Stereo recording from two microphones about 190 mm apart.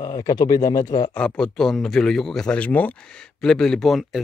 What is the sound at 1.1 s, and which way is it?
A man's voice, 5° left (ahead or behind).